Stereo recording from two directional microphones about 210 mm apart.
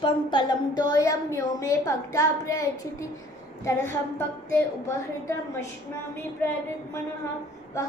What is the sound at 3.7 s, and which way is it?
Speech, 15° left (ahead or behind).